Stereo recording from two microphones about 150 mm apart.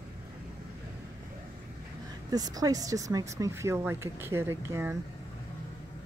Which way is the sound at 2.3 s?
25° right (ahead or behind).